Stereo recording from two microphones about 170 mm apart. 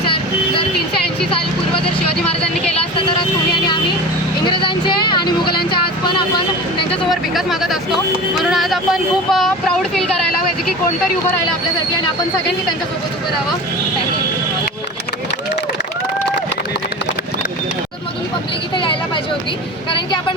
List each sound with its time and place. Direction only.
4.4 s speech: 30° left (ahead or behind)
6.9 s a sound: centre (ahead or behind)
8.4 s speech: centre (ahead or behind)